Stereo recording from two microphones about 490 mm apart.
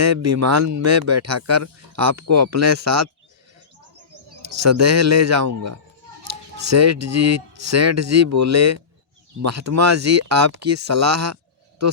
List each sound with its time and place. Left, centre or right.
0.0 s speech: right
4.4 s speech: right